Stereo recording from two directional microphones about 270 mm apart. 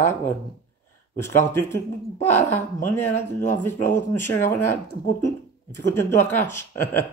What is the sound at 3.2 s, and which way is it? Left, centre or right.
Speech, centre.